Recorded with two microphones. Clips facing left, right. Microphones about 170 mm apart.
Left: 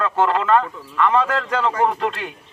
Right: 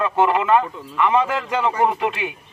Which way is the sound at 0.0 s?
15° right (ahead or behind).